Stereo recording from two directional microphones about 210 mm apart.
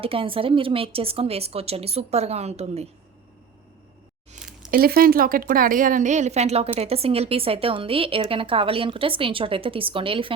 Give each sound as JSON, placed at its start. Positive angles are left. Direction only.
{"t": 0.0, "sound": "speech", "side_deg": -25}
{"t": 4.4, "sound": "a sound", "side_deg": -5}
{"t": 4.7, "sound": "speech", "side_deg": -45}